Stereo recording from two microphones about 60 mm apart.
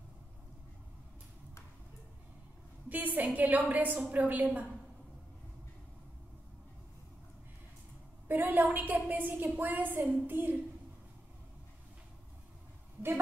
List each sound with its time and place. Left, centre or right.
2.9 s a woman's voice: right
8.3 s a woman's voice: right